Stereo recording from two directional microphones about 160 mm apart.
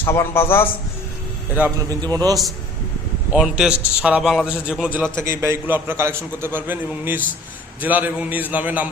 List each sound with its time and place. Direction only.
0.0 s a man's voice: 15° left (ahead or behind)
1.9 s a man's voice: 25° right (ahead or behind)
3.3 s a man's voice: 5° right (ahead or behind)